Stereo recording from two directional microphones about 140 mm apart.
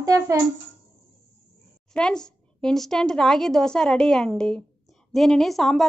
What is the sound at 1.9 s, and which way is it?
A woman's voice, 5° left (ahead or behind).